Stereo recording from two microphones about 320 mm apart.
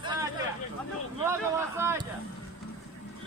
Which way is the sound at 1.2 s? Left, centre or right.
Centre.